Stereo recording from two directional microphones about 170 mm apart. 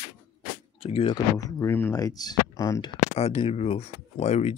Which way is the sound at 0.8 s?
35° left (ahead or behind).